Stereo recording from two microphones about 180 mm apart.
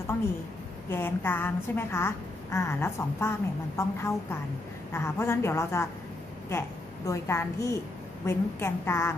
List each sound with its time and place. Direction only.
0.8 s a woman's voice: 10° left (ahead or behind)
7.1 s a woman's voice: 15° left (ahead or behind)